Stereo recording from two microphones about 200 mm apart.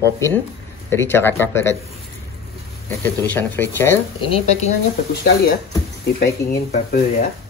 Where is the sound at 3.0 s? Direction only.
10° left (ahead or behind).